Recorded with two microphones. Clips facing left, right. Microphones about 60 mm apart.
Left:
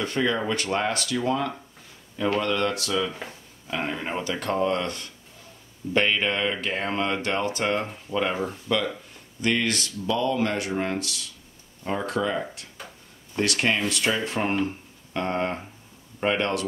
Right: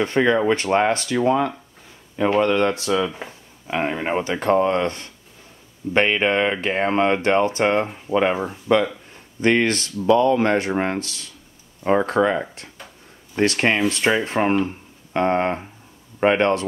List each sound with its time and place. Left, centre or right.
0.0 s speech: right
12.7 s a sound: centre
13.4 s speech: right